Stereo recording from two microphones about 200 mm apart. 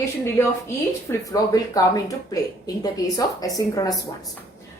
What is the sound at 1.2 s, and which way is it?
Speech, 15° left (ahead or behind).